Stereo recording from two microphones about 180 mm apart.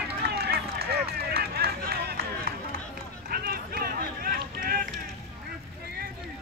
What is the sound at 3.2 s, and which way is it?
Run, 55° right (ahead or behind).